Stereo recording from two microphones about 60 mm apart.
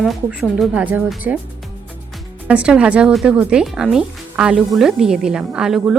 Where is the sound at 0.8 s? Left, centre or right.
Right.